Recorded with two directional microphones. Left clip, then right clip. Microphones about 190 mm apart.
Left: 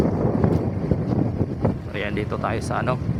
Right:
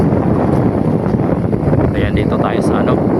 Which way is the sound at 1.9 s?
15° right (ahead or behind).